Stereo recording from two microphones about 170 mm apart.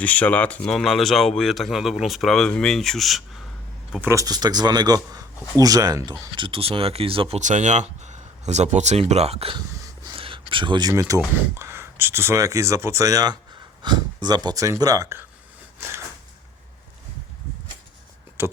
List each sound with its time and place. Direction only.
0.0 s speech: 10° left (ahead or behind)
4.0 s speech: 20° right (ahead or behind); by 9.6 s 35° right (ahead or behind)
10.1 s a sound: 30° right (ahead or behind)
11.5 s speech: 15° right (ahead or behind)
18.4 s speech: 15° right (ahead or behind)